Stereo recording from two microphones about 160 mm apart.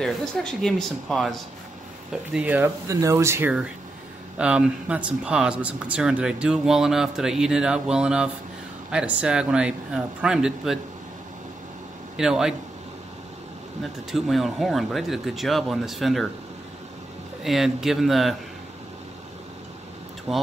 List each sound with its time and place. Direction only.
0.0 s speech: centre (ahead or behind)
2.3 s speech: 10° right (ahead or behind)
12.2 s speech: 5° right (ahead or behind)
14.1 s speech: centre (ahead or behind)
17.4 s speech: centre (ahead or behind)
20.3 s speech: centre (ahead or behind)